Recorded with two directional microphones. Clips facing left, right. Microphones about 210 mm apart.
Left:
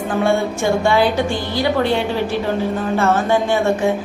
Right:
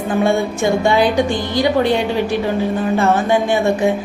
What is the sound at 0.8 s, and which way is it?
A woman's voice, 15° right (ahead or behind).